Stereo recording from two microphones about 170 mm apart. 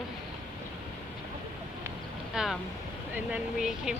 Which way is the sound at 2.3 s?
Centre (ahead or behind).